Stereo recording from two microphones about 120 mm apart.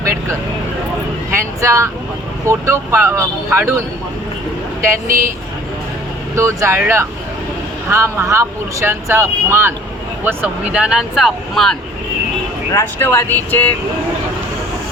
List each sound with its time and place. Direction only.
0.0 s vehicle: 25° right (ahead or behind)
2.5 s speech: 25° right (ahead or behind)
6.3 s speech: 25° right (ahead or behind); by 11.8 s 5° left (ahead or behind)
12.7 s speech: 20° left (ahead or behind)